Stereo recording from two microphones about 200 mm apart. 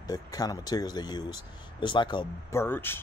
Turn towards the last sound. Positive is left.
turn(degrees=10)  # may be behind; listen again after turning